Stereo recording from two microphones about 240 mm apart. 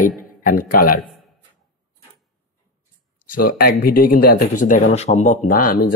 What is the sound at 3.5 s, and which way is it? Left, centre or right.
Speech, left.